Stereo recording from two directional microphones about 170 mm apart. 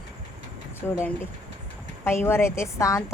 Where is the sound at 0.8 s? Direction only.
5° left (ahead or behind).